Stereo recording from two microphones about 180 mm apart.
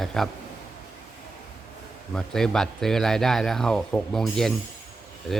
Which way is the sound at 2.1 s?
5° left (ahead or behind).